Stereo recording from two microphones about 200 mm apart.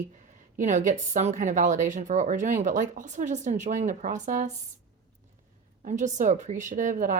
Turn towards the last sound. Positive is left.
turn(degrees=-40)  # may be behind; listen again after turning